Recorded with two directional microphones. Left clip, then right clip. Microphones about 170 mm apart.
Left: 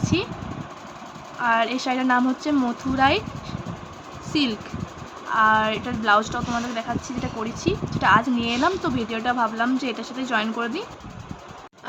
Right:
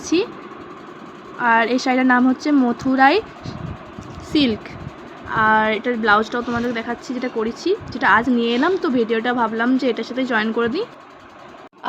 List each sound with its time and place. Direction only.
0.0 s speech: 20° right (ahead or behind)
1.4 s speech: 20° right (ahead or behind)
4.3 s speech: 20° right (ahead or behind)